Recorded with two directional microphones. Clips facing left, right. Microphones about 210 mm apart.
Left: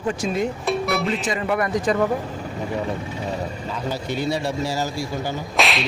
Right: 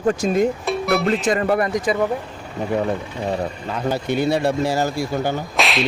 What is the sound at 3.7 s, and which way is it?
Speech, 60° right (ahead or behind).